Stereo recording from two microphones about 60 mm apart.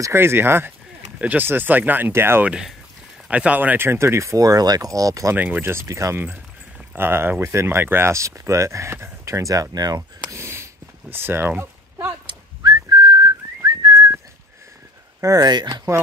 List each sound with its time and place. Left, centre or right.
0.1 s speech: right
2.1 s speech: right
3.3 s speech: right
3.7 s speech: right
4.4 s speech: right
5.3 s speech: right
5.9 s speech: right
7.0 s speech: right
8.1 s speech: right
10.3 s a sound: right
12.9 s whistling: right
13.6 s whistling: right
15.1 s speech: right